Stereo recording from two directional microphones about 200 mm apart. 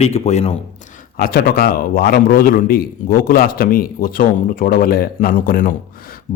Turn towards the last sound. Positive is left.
turn(degrees=45)  # may be behind; listen again after turning